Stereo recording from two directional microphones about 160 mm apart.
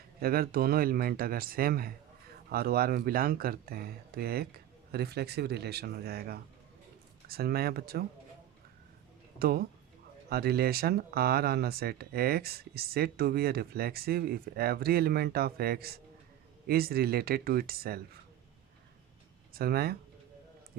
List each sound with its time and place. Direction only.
0.2 s speech: 70° right (ahead or behind)
9.4 s speech: 70° right (ahead or behind)
19.5 s speech: 75° right (ahead or behind)